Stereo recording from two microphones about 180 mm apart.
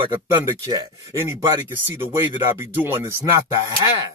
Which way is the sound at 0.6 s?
15° right (ahead or behind).